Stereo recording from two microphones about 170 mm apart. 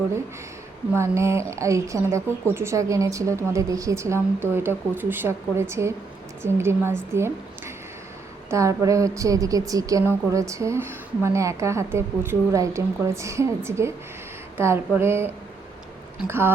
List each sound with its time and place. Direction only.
0.9 s a woman's voice: 15° right (ahead or behind)
8.4 s a woman's voice: 20° right (ahead or behind)